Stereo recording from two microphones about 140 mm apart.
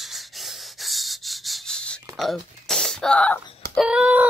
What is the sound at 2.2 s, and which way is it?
Music, centre (ahead or behind).